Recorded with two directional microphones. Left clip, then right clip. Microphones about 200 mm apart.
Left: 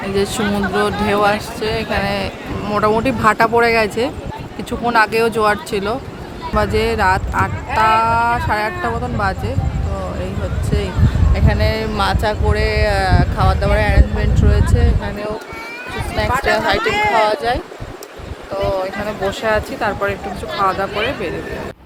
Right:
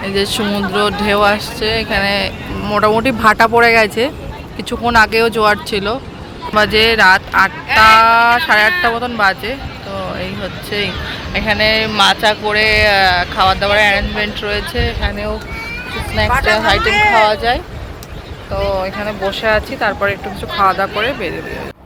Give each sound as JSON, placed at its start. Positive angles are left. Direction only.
{"t": 0.1, "sound": "speech", "side_deg": 10}
{"t": 10.7, "sound": "speech", "side_deg": 0}
{"t": 16.8, "sound": "speech", "side_deg": -20}
{"t": 17.2, "sound": "speech", "side_deg": 0}